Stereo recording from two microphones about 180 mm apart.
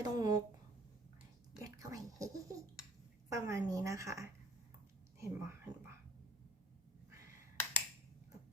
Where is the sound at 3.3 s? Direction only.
15° right (ahead or behind).